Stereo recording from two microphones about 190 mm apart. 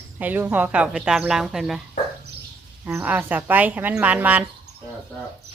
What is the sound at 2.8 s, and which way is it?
Speech, 10° right (ahead or behind).